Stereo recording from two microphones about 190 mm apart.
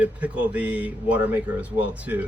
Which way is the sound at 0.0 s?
5° right (ahead or behind).